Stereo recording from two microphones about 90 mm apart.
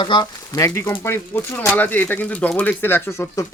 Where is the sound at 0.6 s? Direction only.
30° left (ahead or behind).